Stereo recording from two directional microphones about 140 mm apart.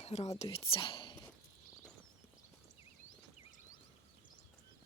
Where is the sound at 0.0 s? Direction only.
50° left (ahead or behind).